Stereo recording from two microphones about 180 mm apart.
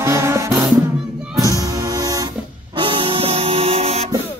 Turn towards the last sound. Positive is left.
turn(degrees=-35)  # may be behind; listen again after turning